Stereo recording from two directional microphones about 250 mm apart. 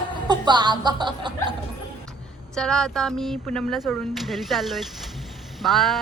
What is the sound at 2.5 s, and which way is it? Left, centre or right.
Speech, centre.